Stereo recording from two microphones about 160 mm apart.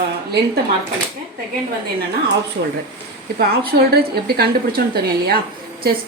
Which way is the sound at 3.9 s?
75° right (ahead or behind).